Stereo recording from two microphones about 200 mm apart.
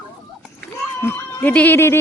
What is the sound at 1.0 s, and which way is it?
Speech, 10° left (ahead or behind).